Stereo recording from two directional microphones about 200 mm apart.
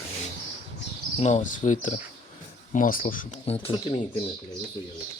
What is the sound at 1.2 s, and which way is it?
Speech, 35° left (ahead or behind).